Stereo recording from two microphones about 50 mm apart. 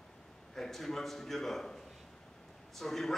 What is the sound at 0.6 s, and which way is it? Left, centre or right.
A man's voice, centre.